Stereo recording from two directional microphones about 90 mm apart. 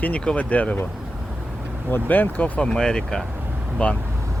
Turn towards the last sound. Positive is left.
turn(degrees=10)  # may be behind; listen again after turning